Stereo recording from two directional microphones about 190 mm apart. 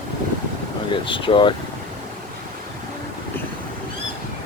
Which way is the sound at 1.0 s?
25° left (ahead or behind).